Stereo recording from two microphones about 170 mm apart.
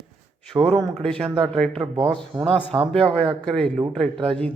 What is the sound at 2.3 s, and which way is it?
Speech, 25° right (ahead or behind).